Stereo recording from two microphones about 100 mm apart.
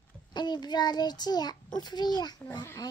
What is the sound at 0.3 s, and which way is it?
A child's voice, 45° left (ahead or behind).